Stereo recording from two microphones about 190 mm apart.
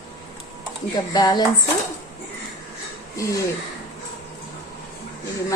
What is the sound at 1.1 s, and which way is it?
Speech, 20° left (ahead or behind).